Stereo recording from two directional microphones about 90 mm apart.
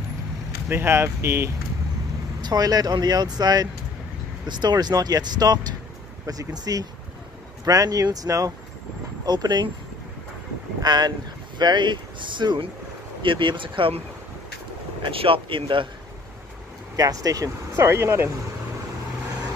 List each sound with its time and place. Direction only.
0.7 s speech: 30° right (ahead or behind)
2.4 s speech: 45° right (ahead or behind)
9.2 s speech: 50° right (ahead or behind)
10.8 s speech: 50° right (ahead or behind); by 15.9 s 70° right (ahead or behind)
16.9 s speech: 40° right (ahead or behind)